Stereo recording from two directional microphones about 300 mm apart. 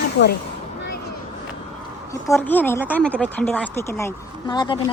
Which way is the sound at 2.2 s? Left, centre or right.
Centre.